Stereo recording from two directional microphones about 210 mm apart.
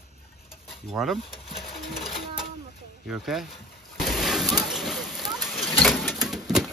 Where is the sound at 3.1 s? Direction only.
Centre (ahead or behind).